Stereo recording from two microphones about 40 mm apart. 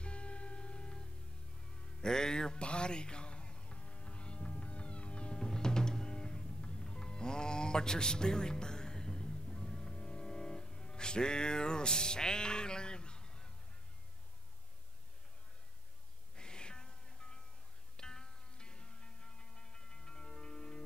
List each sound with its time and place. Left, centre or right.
0.0 s music: left
16.3 s music: left